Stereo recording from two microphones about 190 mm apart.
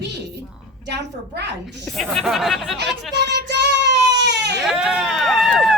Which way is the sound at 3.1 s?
65° right (ahead or behind).